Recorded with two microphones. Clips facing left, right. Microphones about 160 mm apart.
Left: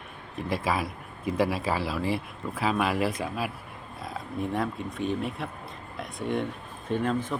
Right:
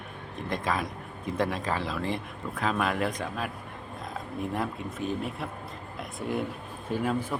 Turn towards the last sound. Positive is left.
turn(degrees=-5)  # may be behind; listen again after turning